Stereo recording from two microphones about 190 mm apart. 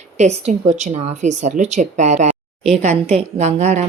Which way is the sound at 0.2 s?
35° right (ahead or behind).